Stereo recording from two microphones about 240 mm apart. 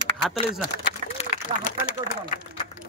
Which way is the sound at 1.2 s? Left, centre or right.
Left.